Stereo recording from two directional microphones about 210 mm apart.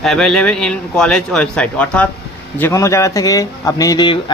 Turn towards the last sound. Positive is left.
turn(degrees=20)  # may be behind; listen again after turning